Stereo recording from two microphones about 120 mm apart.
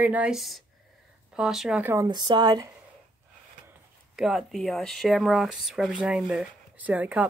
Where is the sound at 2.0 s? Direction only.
35° right (ahead or behind).